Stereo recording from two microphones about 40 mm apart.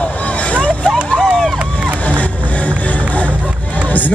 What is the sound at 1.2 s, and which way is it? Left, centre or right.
Run, centre.